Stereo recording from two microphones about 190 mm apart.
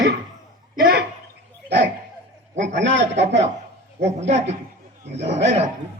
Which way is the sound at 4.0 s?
35° right (ahead or behind).